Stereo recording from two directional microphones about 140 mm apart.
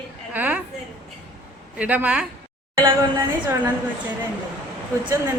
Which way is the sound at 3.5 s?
15° right (ahead or behind).